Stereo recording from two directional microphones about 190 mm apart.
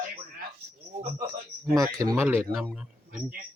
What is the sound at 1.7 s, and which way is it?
Speech, 20° right (ahead or behind).